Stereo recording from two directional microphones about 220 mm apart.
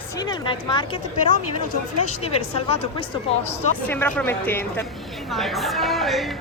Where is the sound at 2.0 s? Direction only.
25° left (ahead or behind).